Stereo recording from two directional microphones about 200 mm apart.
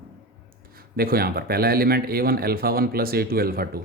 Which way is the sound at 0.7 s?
50° right (ahead or behind).